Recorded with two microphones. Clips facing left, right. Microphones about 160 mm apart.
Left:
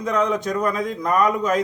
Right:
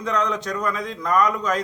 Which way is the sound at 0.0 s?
10° left (ahead or behind).